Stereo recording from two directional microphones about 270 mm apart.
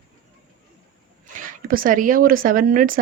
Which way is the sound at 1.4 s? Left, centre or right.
Right.